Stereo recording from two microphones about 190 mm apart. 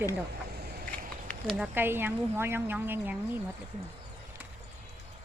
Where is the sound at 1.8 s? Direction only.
10° right (ahead or behind).